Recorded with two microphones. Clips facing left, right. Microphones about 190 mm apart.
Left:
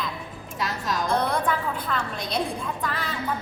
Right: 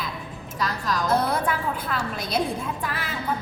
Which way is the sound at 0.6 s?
25° left (ahead or behind).